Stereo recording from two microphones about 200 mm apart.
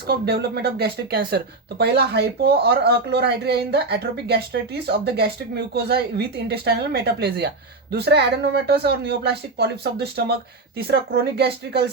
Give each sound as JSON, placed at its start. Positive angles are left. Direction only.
{"t": 0.1, "sound": "speech", "side_deg": -50}